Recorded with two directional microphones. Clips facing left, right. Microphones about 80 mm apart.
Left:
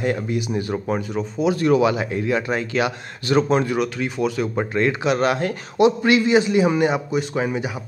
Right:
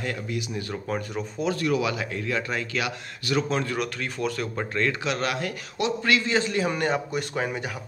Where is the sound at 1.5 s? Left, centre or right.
Left.